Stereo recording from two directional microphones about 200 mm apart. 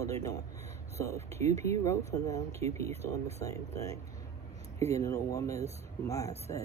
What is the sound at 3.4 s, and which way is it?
Speech, 15° left (ahead or behind).